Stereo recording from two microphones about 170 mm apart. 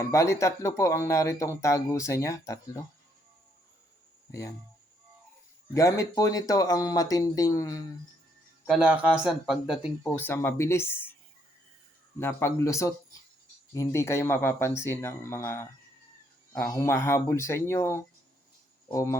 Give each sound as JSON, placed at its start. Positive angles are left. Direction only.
{"t": 0.0, "sound": "speech", "side_deg": 15}
{"t": 4.3, "sound": "speech", "side_deg": 15}
{"t": 5.7, "sound": "speech", "side_deg": 20}
{"t": 8.7, "sound": "speech", "side_deg": -5}
{"t": 10.0, "sound": "speech", "side_deg": 15}
{"t": 12.2, "sound": "speech", "side_deg": 15}